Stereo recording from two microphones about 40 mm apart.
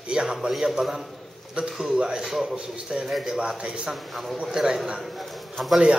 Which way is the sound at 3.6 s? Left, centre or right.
Centre.